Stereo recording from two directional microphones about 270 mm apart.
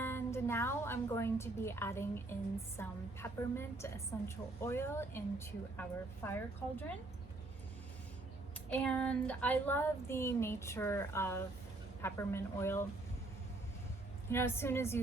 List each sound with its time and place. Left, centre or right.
0.0 s a woman's voice: centre
8.7 s a woman's voice: centre
14.3 s a woman's voice: centre